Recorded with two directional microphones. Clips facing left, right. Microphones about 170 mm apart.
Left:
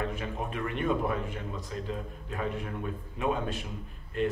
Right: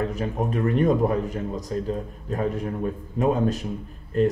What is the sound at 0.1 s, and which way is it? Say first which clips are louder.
Speech: right 9 dB; 40° right (ahead or behind).